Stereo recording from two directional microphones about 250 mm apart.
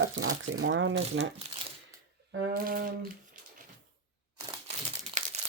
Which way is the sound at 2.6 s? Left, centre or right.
Right.